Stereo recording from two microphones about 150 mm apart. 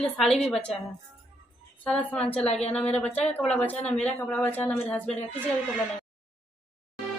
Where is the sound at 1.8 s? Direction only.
5° left (ahead or behind).